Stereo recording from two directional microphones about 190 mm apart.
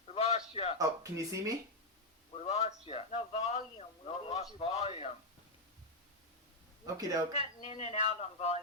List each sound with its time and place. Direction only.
0.1 s a sound: 30° left (ahead or behind)
0.5 s a man's voice: 30° left (ahead or behind)
0.8 s speech: 15° right (ahead or behind)
2.4 s a man's voice: 35° left (ahead or behind)
6.8 s speech: 20° right (ahead or behind)
7.3 s a man's voice: 35° left (ahead or behind)